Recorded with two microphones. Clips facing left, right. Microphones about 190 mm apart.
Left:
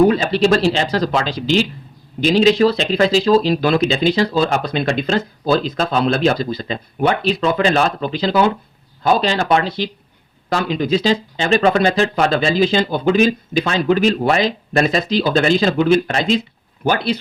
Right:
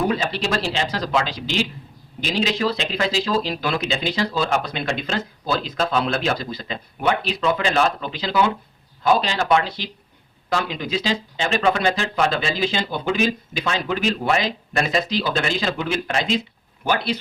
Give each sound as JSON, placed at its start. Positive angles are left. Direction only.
{"t": 0.3, "sound": "speech", "side_deg": 30}